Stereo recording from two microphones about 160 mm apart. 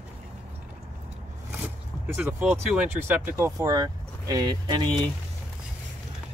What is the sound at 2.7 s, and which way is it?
Speech, 10° right (ahead or behind).